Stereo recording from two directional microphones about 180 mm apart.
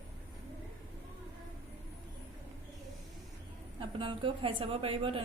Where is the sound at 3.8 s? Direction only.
30° right (ahead or behind).